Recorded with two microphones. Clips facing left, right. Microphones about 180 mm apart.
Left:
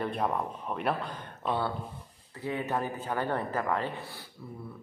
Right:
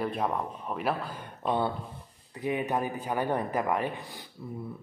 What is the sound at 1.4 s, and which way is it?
A man's voice, 20° right (ahead or behind).